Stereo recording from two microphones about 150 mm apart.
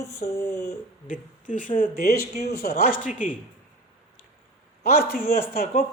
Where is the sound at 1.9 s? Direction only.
90° left.